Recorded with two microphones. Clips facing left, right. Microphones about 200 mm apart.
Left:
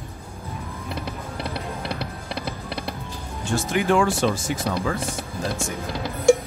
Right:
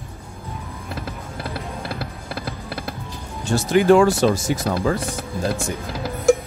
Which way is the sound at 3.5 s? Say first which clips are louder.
Right 6 dB; 40° right (ahead or behind).